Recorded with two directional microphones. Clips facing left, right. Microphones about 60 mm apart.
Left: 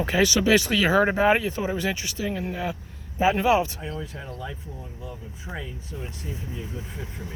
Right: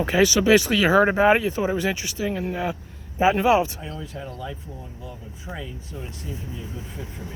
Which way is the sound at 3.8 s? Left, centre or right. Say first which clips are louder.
Even; left.